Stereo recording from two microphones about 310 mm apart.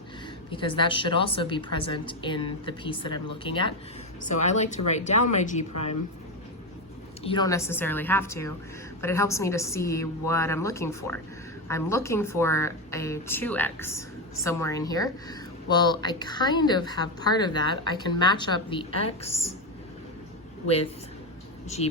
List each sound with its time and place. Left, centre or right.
0.5 s speech: centre
7.2 s speech: centre
19.3 s a woman's voice: left
21.8 s speech: centre